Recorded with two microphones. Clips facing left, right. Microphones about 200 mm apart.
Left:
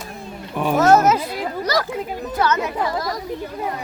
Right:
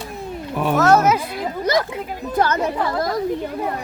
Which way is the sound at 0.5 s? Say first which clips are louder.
Even; centre (ahead or behind).